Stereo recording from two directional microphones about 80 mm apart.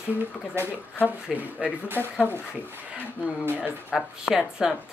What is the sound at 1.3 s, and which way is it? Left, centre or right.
Speech, centre.